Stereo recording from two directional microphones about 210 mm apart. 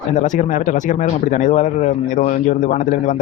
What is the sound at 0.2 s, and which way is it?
Speech, 35° left (ahead or behind).